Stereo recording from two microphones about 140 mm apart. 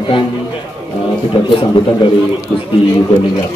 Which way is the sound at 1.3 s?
35° left (ahead or behind).